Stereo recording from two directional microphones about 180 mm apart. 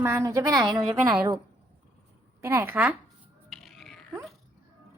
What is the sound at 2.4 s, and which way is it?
Speech, 15° right (ahead or behind).